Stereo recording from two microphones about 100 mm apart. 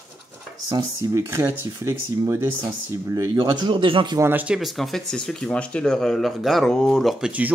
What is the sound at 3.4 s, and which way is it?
Speech, 50° right (ahead or behind).